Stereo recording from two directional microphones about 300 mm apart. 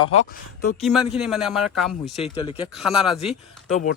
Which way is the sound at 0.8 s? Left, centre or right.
Centre.